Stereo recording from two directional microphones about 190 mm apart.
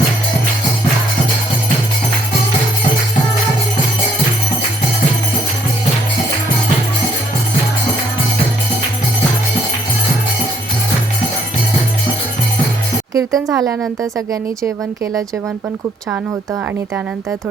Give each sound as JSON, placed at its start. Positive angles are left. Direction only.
{"t": 13.1, "sound": "a woman's voice", "side_deg": -20}